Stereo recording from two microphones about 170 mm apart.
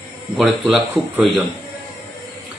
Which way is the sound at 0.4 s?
Centre (ahead or behind).